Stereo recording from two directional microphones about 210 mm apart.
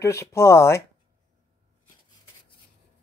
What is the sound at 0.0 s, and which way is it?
Speech, 15° left (ahead or behind).